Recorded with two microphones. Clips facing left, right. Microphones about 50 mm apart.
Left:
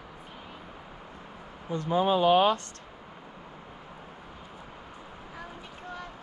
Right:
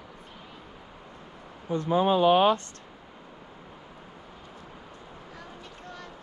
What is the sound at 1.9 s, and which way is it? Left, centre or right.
Speech, right.